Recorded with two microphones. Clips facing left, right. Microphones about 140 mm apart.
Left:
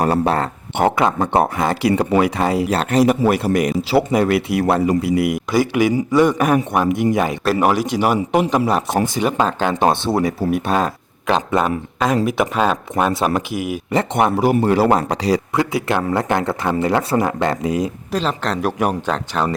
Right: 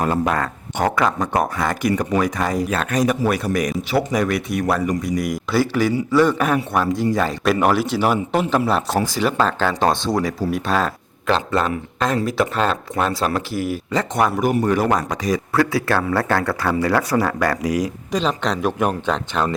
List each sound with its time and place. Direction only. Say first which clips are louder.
0.0 s speech: left 3 dB; 35° left (ahead or behind)
4.3 s speech: left 4 dB; 70° left (ahead or behind)
4.6 s speech: left 3 dB; 30° left (ahead or behind)
4.9 s a man's voice: left 5 dB; 65° left (ahead or behind)
5.5 s speech: even; 15° left (ahead or behind)
18.1 s speech: right 1 dB; 5° left (ahead or behind)